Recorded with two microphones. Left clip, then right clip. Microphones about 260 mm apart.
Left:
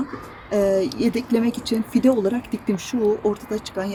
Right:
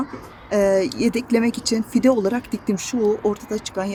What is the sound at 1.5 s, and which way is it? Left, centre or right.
Speech, centre.